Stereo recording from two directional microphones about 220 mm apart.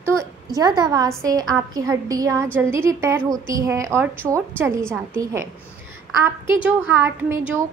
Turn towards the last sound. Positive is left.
turn(degrees=-10)  # may be behind; listen again after turning